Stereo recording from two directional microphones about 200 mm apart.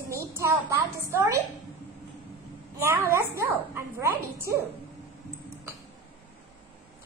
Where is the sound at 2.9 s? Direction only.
10° right (ahead or behind).